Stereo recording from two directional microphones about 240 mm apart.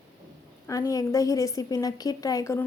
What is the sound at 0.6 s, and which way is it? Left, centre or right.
A woman's voice, centre.